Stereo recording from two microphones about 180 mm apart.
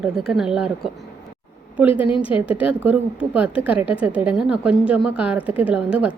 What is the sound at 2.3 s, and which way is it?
A woman's voice, 10° right (ahead or behind).